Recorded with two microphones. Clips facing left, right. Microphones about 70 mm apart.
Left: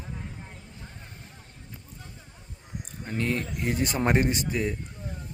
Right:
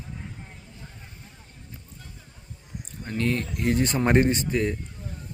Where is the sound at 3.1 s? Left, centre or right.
Centre.